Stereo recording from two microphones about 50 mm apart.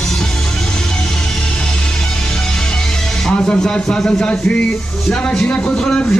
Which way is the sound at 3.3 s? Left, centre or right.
Left.